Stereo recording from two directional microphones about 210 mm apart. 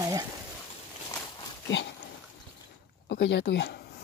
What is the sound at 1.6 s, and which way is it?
Dog, 60° left (ahead or behind).